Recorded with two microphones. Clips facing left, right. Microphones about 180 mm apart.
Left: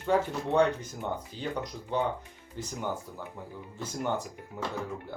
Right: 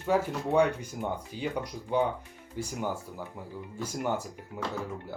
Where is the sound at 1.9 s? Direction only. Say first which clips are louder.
Right 2 dB; 10° right (ahead or behind).